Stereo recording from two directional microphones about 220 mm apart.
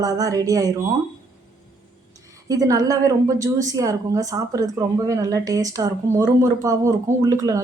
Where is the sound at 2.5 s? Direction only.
15° right (ahead or behind).